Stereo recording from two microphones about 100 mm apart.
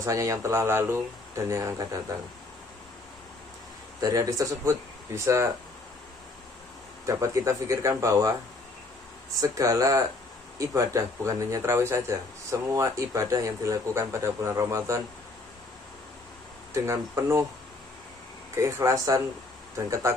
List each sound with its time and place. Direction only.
0.0 s speech: 30° right (ahead or behind)
4.0 s speech: 35° right (ahead or behind)
7.1 s speech: 30° right (ahead or behind)
9.4 s speech: 35° right (ahead or behind)
16.7 s speech: 25° right (ahead or behind)
18.6 s speech: 30° right (ahead or behind)